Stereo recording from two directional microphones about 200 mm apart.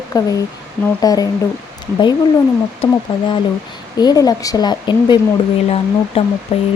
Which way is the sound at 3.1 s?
25° left (ahead or behind).